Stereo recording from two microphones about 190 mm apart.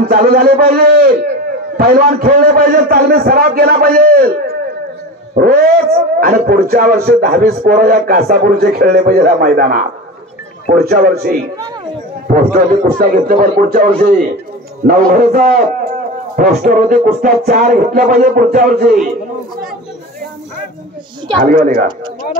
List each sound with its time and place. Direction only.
0.0 s speech: 50° right (ahead or behind)
21.5 s speech: 45° right (ahead or behind)